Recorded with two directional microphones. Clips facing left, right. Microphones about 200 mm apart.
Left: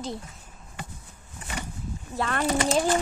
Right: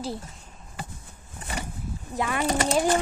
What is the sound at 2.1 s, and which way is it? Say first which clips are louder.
Speech: even; 10° right (ahead or behind).